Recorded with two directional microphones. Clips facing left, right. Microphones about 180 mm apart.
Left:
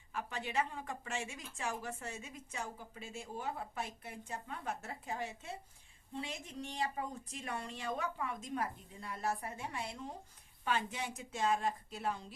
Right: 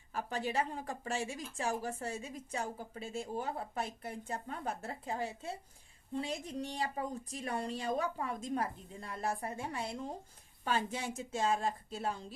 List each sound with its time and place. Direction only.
0.1 s a woman's voice: 35° right (ahead or behind)